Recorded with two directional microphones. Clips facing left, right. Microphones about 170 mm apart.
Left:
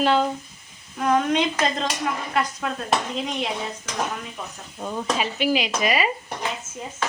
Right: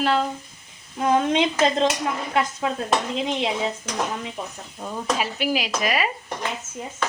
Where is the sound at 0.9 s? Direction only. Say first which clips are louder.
Right 1 dB; 25° right (ahead or behind).